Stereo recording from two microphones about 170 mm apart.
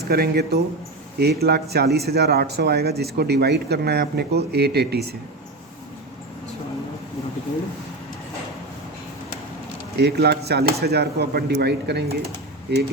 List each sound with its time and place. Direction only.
0.1 s speech: 70° right (ahead or behind)
10.0 s speech: 75° right (ahead or behind)